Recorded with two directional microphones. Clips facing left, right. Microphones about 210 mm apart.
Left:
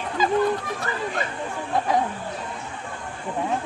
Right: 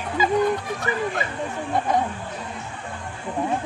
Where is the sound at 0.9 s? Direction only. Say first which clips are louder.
Right 7 dB; 15° right (ahead or behind).